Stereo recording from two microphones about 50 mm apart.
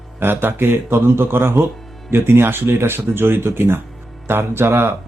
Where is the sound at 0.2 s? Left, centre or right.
Right.